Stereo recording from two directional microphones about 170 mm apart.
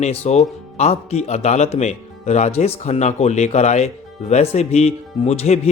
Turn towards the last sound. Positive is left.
turn(degrees=40)  # may be behind; listen again after turning